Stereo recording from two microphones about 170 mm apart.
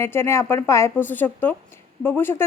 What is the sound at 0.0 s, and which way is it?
Speech, 15° left (ahead or behind).